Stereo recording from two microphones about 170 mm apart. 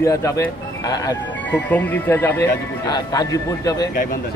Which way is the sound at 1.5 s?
10° left (ahead or behind).